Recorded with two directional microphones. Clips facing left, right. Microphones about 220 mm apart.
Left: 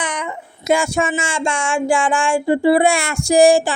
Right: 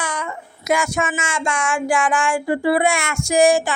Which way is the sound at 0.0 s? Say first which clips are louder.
Left 2 dB; 20° left (ahead or behind).